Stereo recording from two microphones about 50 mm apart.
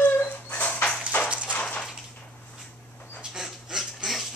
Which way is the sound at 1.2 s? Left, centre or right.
Right.